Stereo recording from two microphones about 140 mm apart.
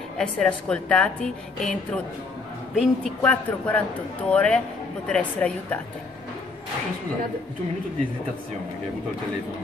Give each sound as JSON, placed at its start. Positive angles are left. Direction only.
{"t": 0.2, "sound": "a man's voice", "side_deg": 5}